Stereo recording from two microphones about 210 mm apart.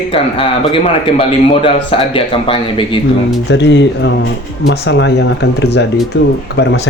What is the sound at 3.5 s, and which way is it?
Speech, 55° left (ahead or behind).